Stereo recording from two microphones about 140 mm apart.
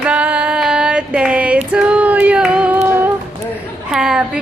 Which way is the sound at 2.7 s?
15° right (ahead or behind).